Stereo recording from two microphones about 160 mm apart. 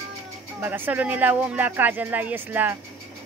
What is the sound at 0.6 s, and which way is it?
Speech, 10° right (ahead or behind).